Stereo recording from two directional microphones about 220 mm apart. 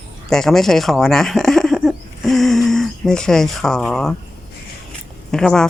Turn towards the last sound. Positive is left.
turn(degrees=5)  # may be behind; listen again after turning